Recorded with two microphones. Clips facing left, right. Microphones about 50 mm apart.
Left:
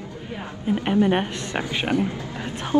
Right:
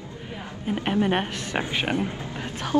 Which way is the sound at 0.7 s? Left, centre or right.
Centre.